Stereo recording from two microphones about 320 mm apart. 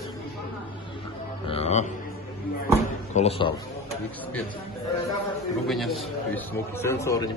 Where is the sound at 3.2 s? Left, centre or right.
Centre.